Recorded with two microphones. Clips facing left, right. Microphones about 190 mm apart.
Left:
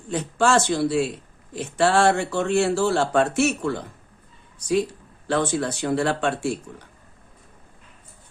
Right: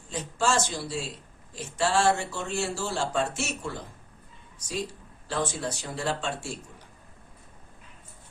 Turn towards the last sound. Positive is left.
turn(degrees=65)  # may be behind; listen again after turning